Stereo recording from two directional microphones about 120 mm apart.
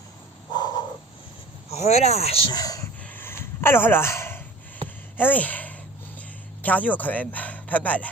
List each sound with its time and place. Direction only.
0.5 s crow: 35° left (ahead or behind)
1.7 s speech: 65° left (ahead or behind)
2.5 s speech: 30° left (ahead or behind)
3.0 s a sound: 15° left (ahead or behind)
5.1 s speech: 15° left (ahead or behind)